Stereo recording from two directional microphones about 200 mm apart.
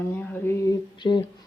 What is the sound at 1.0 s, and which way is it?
Music, 25° left (ahead or behind).